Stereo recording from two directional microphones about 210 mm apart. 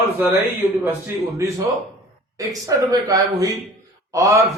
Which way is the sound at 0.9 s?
10° right (ahead or behind).